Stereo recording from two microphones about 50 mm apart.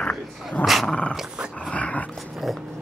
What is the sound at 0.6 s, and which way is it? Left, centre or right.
Dog, left.